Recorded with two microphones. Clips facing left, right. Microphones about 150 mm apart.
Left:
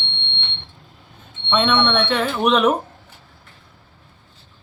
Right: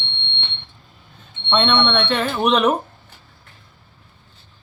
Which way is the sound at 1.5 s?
5° left (ahead or behind).